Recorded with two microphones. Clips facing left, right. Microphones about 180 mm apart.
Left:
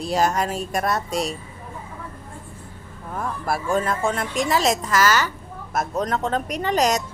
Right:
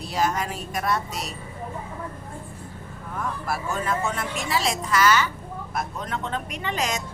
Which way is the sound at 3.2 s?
40° left (ahead or behind).